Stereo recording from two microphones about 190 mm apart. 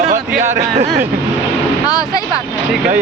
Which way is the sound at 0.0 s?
40° right (ahead or behind).